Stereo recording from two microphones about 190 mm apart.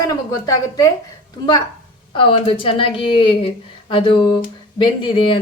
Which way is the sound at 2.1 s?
30° left (ahead or behind).